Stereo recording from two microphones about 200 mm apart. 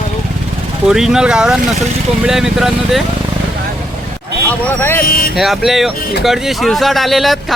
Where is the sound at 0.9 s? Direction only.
Centre (ahead or behind).